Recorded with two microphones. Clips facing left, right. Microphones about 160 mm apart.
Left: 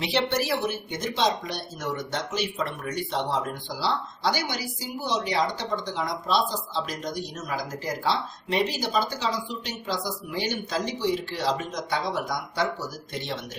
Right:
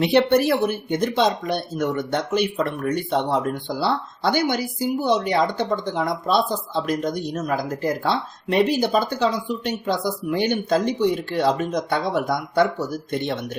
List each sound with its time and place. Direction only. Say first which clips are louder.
0.0 s speech: right 9 dB; 55° right (ahead or behind)